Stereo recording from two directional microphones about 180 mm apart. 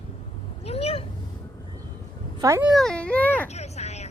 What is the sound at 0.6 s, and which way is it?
Cat, 35° left (ahead or behind).